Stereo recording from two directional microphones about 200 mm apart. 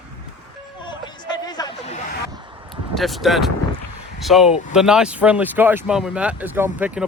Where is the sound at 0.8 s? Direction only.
20° left (ahead or behind).